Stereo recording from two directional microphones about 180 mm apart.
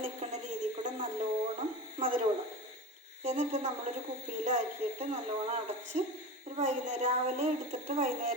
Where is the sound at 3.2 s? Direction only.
40° right (ahead or behind).